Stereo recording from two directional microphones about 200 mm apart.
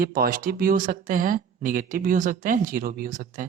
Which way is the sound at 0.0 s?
50° right (ahead or behind).